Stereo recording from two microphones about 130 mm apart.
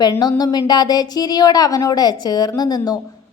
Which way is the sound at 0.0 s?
30° left (ahead or behind).